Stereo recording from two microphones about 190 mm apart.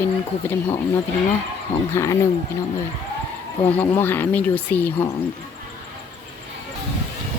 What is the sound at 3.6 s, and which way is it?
Speech, 10° left (ahead or behind).